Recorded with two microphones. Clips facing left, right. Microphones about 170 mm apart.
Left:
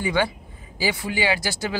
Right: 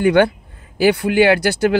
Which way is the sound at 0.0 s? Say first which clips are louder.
Right 10 dB; 65° right (ahead or behind).